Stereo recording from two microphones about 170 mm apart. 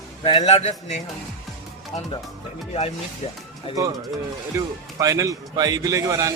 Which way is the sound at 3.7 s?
35° left (ahead or behind).